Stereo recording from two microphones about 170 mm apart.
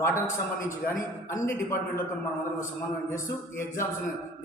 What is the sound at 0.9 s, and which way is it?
Speech, 20° left (ahead or behind).